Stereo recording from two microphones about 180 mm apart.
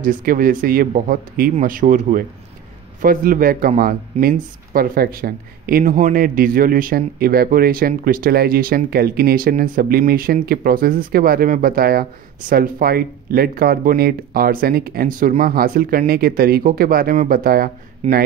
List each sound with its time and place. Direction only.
0.0 s speech: 50° right (ahead or behind)
18.0 s speech: 35° right (ahead or behind)